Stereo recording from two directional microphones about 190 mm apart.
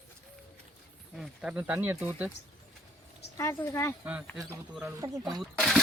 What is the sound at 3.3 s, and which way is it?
Speech, 15° left (ahead or behind).